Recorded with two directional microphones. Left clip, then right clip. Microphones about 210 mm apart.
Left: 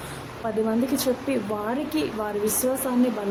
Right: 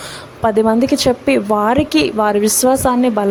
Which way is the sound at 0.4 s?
45° right (ahead or behind).